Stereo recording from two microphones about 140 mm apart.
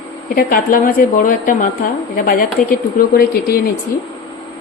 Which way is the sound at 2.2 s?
85° left.